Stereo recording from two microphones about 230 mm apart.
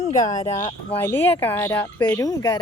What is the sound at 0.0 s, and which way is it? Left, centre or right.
Speech, left.